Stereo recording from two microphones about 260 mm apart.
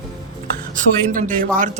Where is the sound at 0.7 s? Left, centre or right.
Right.